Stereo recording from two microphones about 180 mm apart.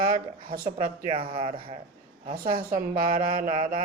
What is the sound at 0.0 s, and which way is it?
Mantra, 50° right (ahead or behind).